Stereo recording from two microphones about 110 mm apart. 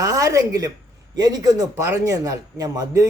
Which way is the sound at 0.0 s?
30° right (ahead or behind).